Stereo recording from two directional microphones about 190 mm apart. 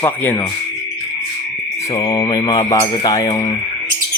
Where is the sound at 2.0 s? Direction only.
20° left (ahead or behind).